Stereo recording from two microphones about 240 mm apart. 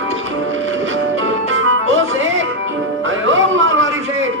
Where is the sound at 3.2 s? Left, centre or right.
Right.